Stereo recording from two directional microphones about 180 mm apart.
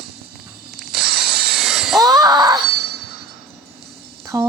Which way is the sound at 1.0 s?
60° right (ahead or behind).